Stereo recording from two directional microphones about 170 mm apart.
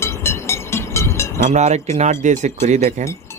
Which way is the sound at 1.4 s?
45° right (ahead or behind).